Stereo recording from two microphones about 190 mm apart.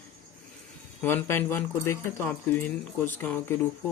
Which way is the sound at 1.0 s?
10° left (ahead or behind).